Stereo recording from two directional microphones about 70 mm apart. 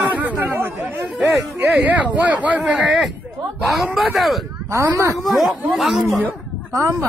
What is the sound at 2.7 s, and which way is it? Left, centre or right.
Speech, centre.